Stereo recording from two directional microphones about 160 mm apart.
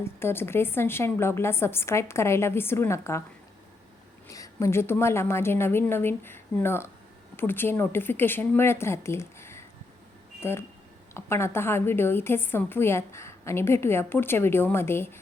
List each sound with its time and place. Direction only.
0.0 s a woman's voice: 15° left (ahead or behind)
4.3 s a woman's voice: 20° left (ahead or behind)